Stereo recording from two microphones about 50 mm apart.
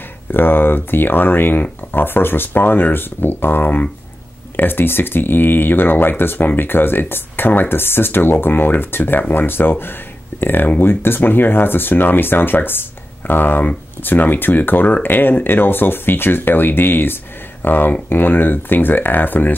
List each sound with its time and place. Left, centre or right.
0.3 s speech: left